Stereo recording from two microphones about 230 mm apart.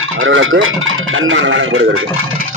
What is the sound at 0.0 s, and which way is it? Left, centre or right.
Speech, right.